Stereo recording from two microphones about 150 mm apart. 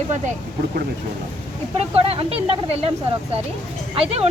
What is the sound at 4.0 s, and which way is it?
Speech, 45° right (ahead or behind).